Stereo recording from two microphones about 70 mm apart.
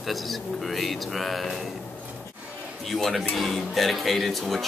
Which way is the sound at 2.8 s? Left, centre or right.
Centre.